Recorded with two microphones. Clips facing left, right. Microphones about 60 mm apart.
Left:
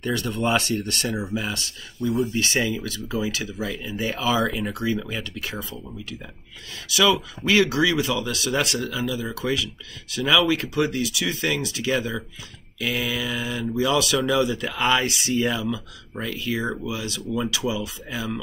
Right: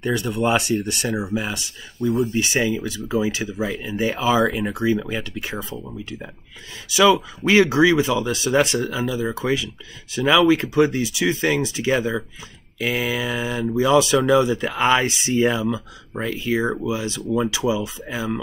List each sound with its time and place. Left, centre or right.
0.0 s speech: centre
2.0 s speech: right
2.3 s speech: centre